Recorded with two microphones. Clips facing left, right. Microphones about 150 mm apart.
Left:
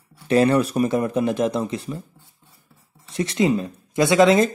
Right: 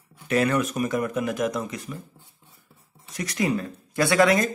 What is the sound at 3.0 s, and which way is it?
Speech, 25° left (ahead or behind).